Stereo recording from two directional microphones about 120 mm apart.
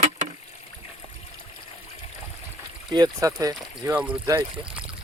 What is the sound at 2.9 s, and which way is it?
Speech, 30° right (ahead or behind).